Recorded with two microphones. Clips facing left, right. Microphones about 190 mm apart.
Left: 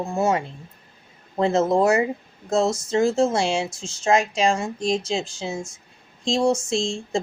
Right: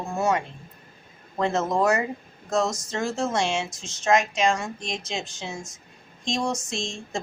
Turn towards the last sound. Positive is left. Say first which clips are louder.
# left 8 dB
turn(degrees=30)  # may be behind; listen again after turning